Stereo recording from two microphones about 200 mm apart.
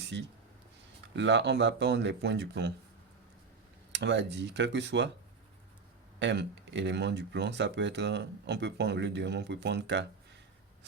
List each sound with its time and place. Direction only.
0.0 s a sound: 60° right (ahead or behind)
1.0 s speech: 65° right (ahead or behind)
3.9 s speech: 60° right (ahead or behind)
6.1 s speech: 60° right (ahead or behind)